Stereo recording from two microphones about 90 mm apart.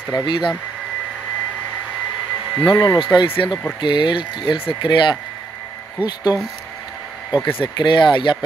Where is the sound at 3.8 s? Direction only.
60° left (ahead or behind).